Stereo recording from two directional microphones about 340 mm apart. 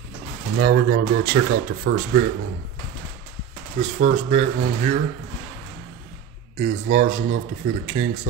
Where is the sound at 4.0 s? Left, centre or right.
Centre.